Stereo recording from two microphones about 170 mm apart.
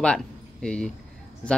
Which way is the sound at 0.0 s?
5° left (ahead or behind).